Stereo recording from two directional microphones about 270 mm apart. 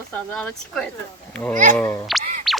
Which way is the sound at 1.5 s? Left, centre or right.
Right.